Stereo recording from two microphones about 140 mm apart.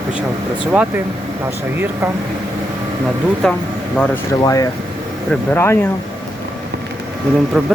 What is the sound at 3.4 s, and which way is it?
Speech, centre (ahead or behind).